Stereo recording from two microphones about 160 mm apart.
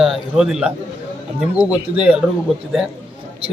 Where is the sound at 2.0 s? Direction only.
5° right (ahead or behind).